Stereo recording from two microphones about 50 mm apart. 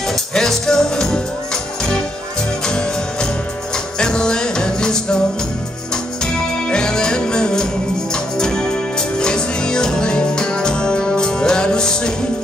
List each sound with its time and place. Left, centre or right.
0.0 s music: centre
6.4 s music: centre